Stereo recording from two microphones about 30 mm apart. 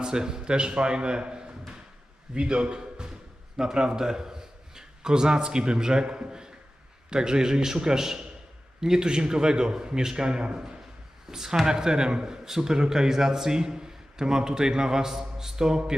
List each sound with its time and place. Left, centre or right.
0.0 s a man's voice: right